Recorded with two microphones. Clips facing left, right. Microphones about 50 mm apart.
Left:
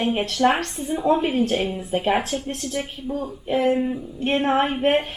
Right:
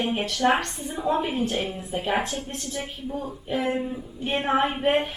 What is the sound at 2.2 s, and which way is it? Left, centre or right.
Speech, centre.